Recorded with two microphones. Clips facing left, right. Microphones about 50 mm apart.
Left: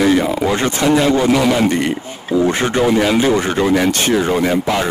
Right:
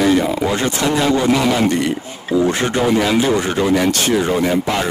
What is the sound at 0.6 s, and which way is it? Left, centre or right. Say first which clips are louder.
A man's voice: left 3 dB; left.